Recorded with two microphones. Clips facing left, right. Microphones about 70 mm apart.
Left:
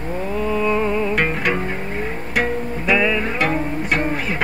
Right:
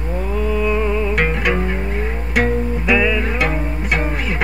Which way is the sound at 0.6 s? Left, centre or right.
Centre.